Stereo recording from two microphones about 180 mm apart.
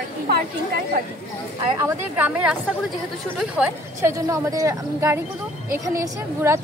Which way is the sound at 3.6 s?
5° right (ahead or behind).